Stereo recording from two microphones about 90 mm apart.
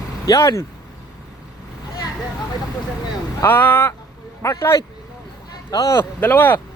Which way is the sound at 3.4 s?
20° left (ahead or behind).